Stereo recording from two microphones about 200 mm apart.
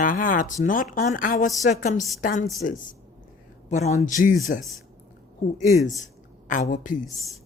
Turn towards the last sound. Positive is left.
turn(degrees=40)  # may be behind; listen again after turning